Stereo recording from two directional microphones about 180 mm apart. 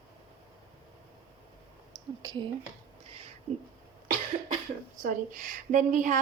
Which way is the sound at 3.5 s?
35° right (ahead or behind).